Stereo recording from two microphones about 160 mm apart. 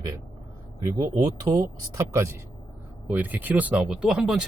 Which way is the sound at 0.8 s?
20° right (ahead or behind).